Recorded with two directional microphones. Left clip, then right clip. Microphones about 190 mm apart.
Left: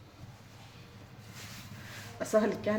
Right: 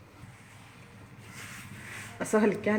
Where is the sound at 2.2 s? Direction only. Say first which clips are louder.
Right 2 dB; 50° right (ahead or behind).